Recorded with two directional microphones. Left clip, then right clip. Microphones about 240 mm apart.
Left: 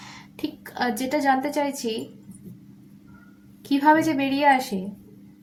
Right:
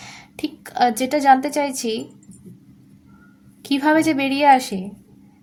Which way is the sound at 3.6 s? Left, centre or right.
Right.